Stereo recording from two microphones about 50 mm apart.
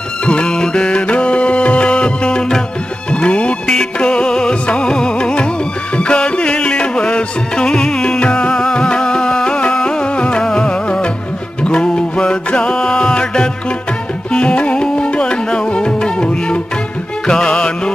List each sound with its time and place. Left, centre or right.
0.2 s music: centre